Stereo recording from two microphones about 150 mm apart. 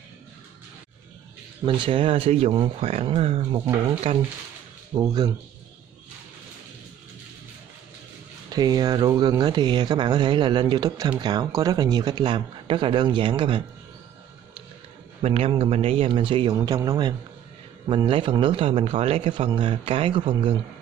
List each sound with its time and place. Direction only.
1.7 s a man's voice: 35° right (ahead or behind)
2.5 s a man's voice: 30° right (ahead or behind)
4.9 s speech: 25° right (ahead or behind)
8.5 s a man's voice: 25° right (ahead or behind)
15.2 s a man's voice: 40° right (ahead or behind)